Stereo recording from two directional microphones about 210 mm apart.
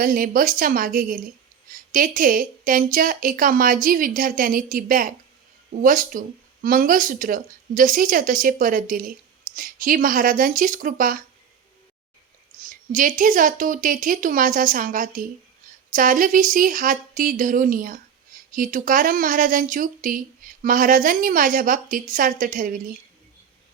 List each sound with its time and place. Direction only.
0.0 s speech: 40° right (ahead or behind)
12.5 s speech: 40° right (ahead or behind)